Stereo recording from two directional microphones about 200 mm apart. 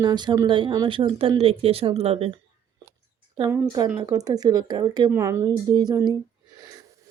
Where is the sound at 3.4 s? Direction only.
15° right (ahead or behind).